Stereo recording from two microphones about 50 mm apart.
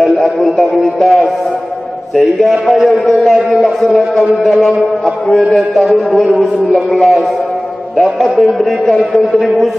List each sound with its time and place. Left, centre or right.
0.2 s music: centre